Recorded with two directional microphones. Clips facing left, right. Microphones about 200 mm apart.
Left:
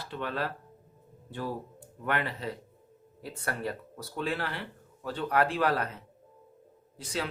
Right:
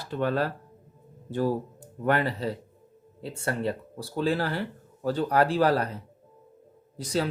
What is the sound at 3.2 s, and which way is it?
A man's voice, 25° right (ahead or behind).